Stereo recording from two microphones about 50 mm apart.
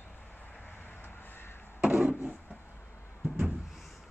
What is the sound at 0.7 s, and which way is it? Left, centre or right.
Vehicle, left.